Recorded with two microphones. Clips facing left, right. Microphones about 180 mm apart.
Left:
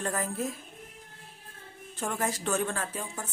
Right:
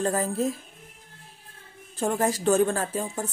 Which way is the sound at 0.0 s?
30° right (ahead or behind).